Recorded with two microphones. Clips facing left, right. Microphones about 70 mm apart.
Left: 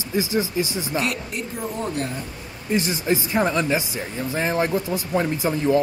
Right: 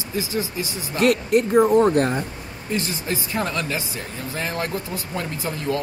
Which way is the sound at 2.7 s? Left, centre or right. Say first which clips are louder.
Left 4 dB; left.